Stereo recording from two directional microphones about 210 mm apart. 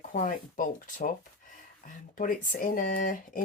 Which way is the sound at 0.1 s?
40° left (ahead or behind).